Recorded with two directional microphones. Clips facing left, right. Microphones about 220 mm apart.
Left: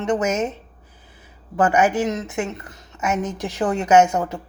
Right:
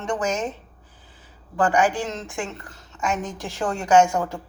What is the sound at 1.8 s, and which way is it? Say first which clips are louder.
A woman's voice: left 3 dB; 20° left (ahead or behind).